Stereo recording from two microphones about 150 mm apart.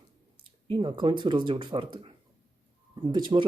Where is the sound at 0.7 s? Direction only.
30° right (ahead or behind).